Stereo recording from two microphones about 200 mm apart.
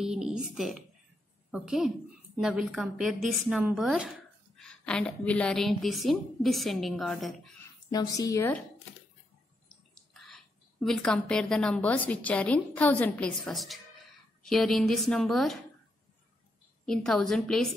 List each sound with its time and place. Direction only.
0.0 s a woman's voice: 5° right (ahead or behind)
7.9 s speech: 20° left (ahead or behind)
10.1 s a woman's voice: centre (ahead or behind)
16.8 s a woman's voice: 5° left (ahead or behind)